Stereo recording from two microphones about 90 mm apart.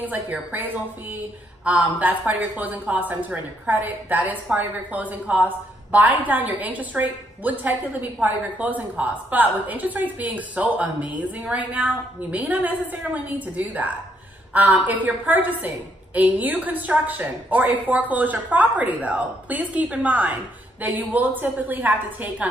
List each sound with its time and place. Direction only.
0.0 s a woman's voice: 20° right (ahead or behind)